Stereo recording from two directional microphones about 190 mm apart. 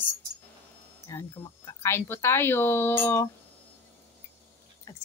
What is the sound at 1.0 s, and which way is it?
Speech, 15° left (ahead or behind).